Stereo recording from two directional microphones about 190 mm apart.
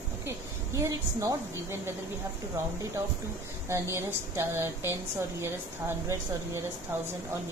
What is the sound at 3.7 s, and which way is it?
A woman's voice, 15° right (ahead or behind).